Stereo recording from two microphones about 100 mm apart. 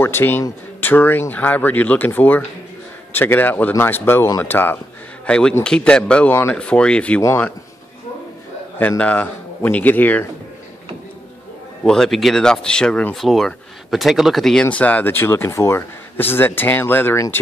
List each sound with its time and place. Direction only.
0.0 s speech: 20° left (ahead or behind)
5.2 s speech: 10° left (ahead or behind)
8.7 s a man's voice: 15° left (ahead or behind)
11.8 s speech: 5° left (ahead or behind); by 17.4 s 25° left (ahead or behind)